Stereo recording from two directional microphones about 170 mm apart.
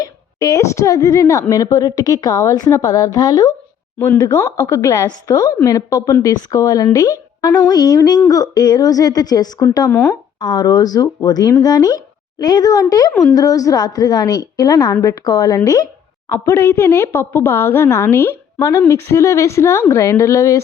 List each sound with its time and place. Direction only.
0.0 s a woman's voice: 20° left (ahead or behind)
9.9 s speech: 10° left (ahead or behind)
10.4 s a woman's voice: 25° left (ahead or behind)